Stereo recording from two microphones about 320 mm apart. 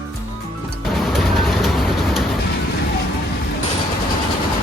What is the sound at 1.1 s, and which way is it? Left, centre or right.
Vehicle, centre.